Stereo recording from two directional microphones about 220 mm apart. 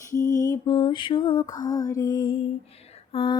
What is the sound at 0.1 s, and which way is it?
Lullaby, 15° left (ahead or behind).